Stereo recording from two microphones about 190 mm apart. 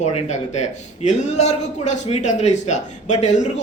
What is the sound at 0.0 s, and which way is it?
Speech, 35° left (ahead or behind).